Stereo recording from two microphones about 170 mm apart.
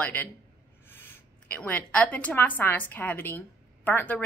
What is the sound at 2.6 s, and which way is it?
A woman's voice, 10° left (ahead or behind).